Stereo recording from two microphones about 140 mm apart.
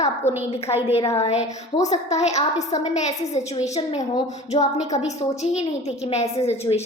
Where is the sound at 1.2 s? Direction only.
50° left (ahead or behind).